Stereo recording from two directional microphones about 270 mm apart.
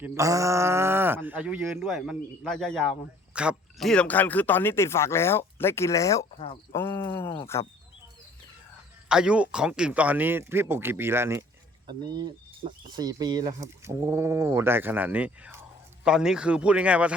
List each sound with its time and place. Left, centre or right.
0.0 s speech: centre
9.0 s speech: centre